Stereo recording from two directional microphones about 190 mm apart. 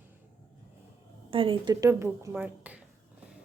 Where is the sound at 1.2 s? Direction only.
30° right (ahead or behind); by 2.8 s 10° right (ahead or behind).